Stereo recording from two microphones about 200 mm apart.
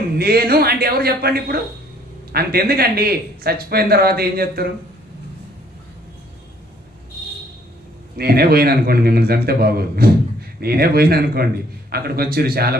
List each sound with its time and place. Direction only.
0.2 s speech: 50° right (ahead or behind)
8.1 s speech: 50° right (ahead or behind)